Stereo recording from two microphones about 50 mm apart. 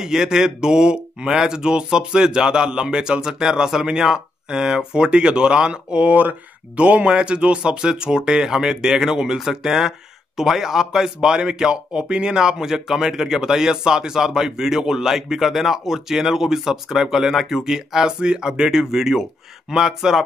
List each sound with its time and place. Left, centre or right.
0.0 s speech: centre